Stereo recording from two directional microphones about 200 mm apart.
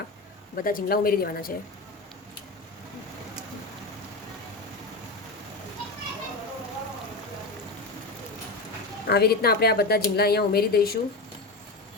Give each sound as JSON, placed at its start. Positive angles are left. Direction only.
{"t": 0.5, "sound": "speech", "side_deg": 45}
{"t": 9.0, "sound": "speech", "side_deg": 50}